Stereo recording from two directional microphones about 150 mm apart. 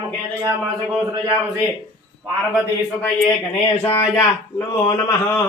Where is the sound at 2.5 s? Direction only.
5° left (ahead or behind).